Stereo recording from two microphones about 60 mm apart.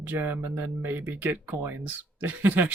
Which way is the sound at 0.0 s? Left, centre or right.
Right.